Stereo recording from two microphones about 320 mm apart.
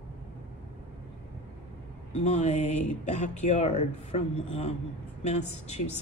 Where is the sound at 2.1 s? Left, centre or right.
Left.